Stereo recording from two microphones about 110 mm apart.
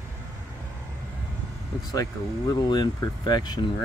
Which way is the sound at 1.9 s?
35° left (ahead or behind).